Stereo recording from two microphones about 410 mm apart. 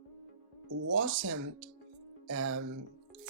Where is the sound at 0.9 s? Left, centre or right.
Right.